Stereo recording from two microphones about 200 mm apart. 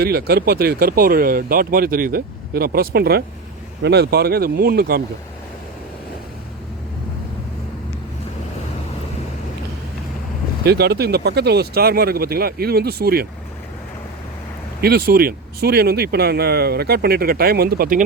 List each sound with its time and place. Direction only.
0.0 s speech: 50° right (ahead or behind)
10.7 s speech: 55° right (ahead or behind)
14.8 s speech: 50° right (ahead or behind)